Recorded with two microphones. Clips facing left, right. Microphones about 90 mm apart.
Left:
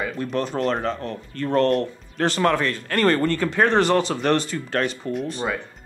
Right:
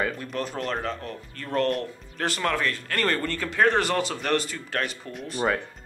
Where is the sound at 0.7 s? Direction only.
25° left (ahead or behind).